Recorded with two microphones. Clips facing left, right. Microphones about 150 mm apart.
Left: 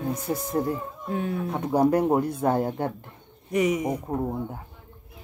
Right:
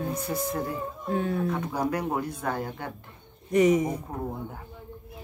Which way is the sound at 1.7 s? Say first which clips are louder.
Left 8 dB; 25° left (ahead or behind).